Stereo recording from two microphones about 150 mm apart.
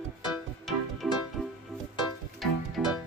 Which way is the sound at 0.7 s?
Centre (ahead or behind).